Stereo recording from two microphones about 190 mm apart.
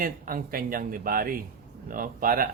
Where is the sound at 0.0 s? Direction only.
50° right (ahead or behind).